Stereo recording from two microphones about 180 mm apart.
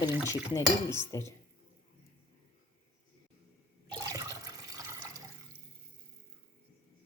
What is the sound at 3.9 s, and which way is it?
Toilet flush, 20° right (ahead or behind).